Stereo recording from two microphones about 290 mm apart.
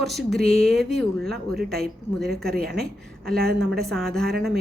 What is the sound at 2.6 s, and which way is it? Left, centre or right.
Speech, centre.